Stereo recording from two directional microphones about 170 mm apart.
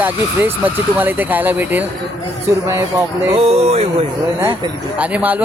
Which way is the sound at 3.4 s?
40° right (ahead or behind).